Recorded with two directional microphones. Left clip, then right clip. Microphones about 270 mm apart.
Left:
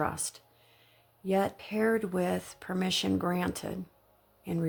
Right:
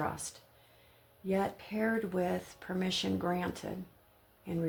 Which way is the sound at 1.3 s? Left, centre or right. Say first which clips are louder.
Left 4 dB; left.